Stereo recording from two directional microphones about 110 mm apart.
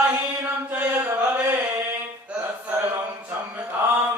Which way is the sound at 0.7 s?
15° right (ahead or behind).